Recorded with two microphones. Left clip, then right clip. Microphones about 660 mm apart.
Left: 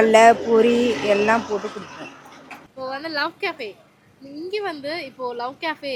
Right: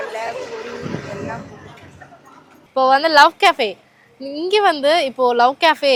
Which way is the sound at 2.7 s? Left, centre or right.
Right.